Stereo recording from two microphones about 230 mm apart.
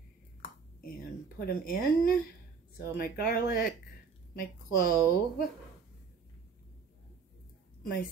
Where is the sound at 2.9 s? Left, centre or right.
Left.